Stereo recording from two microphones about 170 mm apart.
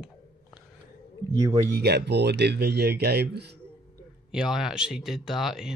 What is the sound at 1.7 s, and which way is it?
Speech, 75° right (ahead or behind).